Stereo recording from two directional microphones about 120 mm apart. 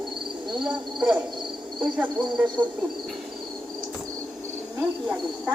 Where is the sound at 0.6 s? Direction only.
10° right (ahead or behind).